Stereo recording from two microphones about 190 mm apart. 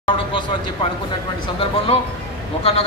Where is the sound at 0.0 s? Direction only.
25° left (ahead or behind).